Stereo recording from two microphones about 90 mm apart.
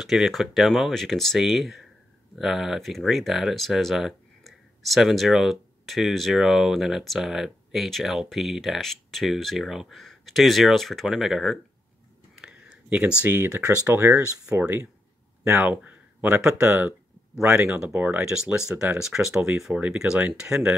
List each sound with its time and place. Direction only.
0.0 s speech: centre (ahead or behind)
12.4 s a sound: 10° right (ahead or behind)
13.2 s speech: 25° right (ahead or behind); by 19.5 s 5° right (ahead or behind)
19.7 s speech: 15° right (ahead or behind)